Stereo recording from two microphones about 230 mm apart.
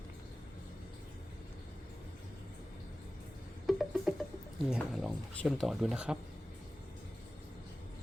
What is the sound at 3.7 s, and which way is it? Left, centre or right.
Music, centre.